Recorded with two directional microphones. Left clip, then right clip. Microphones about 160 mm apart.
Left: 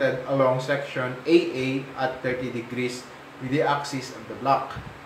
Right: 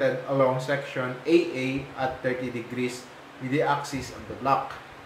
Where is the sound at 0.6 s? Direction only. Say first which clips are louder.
Left 2 dB; 10° right (ahead or behind).